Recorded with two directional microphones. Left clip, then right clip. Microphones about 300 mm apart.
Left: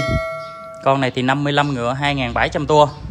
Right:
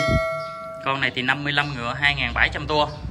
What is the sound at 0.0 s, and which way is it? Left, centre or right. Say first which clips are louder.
Tubular bells: even; centre.